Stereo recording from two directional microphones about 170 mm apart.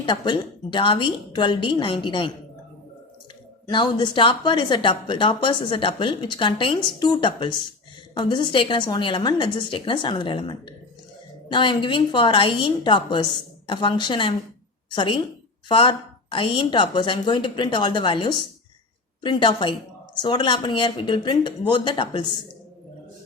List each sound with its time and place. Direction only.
0.0 s a woman's voice: 30° left (ahead or behind)
3.7 s a woman's voice: 25° left (ahead or behind)